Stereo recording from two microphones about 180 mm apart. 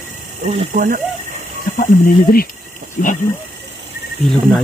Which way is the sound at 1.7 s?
50° left (ahead or behind).